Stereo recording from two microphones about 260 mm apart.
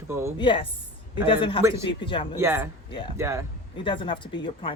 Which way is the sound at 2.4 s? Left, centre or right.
Centre.